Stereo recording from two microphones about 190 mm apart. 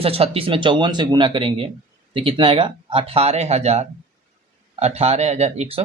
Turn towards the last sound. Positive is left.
turn(degrees=-35)  # may be behind; listen again after turning